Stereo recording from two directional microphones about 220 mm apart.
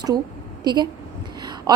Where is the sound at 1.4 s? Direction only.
20° right (ahead or behind).